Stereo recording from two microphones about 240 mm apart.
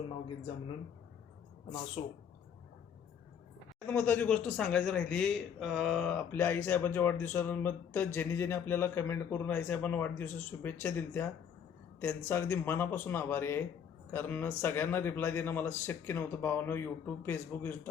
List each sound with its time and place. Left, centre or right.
2.0 s speech: left
3.8 s a man's voice: centre